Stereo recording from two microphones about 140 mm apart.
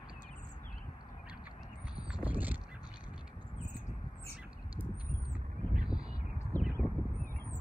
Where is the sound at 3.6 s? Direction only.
60° left (ahead or behind).